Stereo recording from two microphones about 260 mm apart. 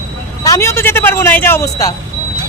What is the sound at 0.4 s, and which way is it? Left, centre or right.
Speech, centre.